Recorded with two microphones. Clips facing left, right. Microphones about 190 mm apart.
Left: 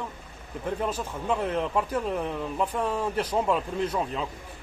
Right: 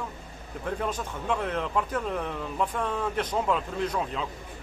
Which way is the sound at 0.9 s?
5° left (ahead or behind).